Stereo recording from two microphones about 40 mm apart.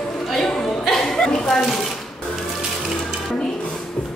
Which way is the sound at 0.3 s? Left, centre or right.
Centre.